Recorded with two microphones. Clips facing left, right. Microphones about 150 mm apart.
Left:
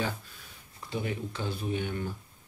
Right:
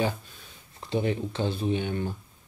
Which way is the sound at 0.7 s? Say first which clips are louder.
Right 7 dB; 25° right (ahead or behind).